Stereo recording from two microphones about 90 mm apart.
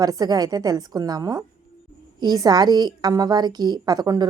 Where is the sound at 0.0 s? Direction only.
45° right (ahead or behind).